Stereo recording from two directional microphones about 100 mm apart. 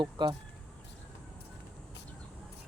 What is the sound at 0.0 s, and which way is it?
Speech, 55° right (ahead or behind).